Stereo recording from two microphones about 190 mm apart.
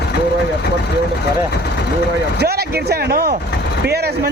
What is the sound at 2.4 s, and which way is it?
Speech, 55° right (ahead or behind).